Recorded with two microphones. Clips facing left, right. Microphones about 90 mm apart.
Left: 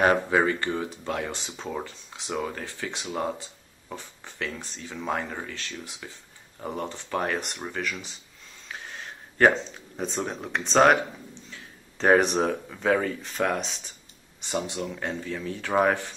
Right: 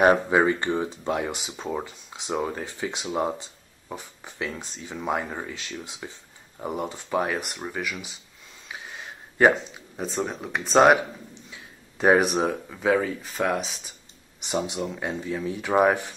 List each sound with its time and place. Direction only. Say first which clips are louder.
0.0 s speech: right 3 dB; 15° right (ahead or behind)
8.6 s a sound: even; 10° right (ahead or behind)
11.5 s speech: right 1 dB; 10° right (ahead or behind)
14.4 s speech: right 2 dB; 20° right (ahead or behind)